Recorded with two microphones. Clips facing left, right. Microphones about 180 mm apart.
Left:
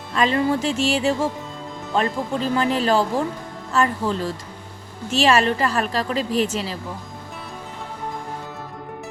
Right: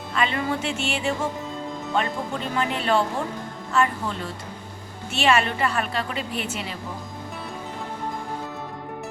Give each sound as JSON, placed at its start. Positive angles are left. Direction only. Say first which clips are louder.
{"t": 0.1, "sound": "a woman's voice", "louder": "left 5 dB", "side_deg": 40}